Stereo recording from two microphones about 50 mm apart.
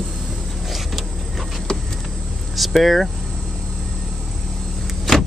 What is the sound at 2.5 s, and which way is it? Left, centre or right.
Speech, centre.